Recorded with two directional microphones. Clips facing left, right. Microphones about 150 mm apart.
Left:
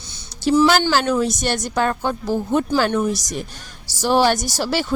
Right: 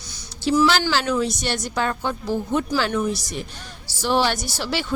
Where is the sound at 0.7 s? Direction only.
45° left (ahead or behind).